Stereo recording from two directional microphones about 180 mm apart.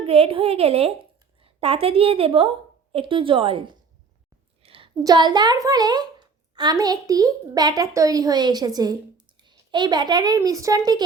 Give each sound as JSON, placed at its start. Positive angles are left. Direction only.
{"t": 0.0, "sound": "a woman's voice", "side_deg": -35}